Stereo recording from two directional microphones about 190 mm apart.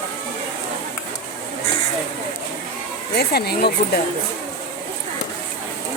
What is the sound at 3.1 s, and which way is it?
Speech, 55° left (ahead or behind).